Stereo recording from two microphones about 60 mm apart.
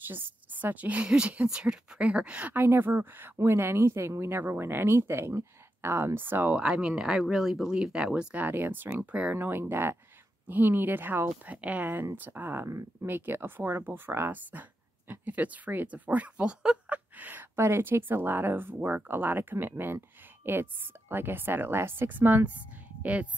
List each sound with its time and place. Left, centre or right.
0.1 s a woman's voice: right
2.5 s speech: right
6.5 s speech: centre
8.5 s speech: right
11.4 s a woman's voice: right
14.3 s speech: right
17.6 s speech: right